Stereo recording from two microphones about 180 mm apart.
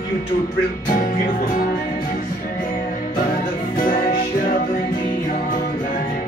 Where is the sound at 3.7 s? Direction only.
50° left (ahead or behind).